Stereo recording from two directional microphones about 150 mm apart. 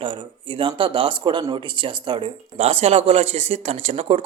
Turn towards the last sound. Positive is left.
turn(degrees=-45)  # may be behind; listen again after turning